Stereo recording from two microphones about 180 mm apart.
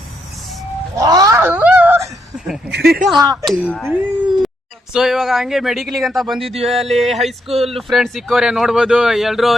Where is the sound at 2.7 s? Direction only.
65° right (ahead or behind).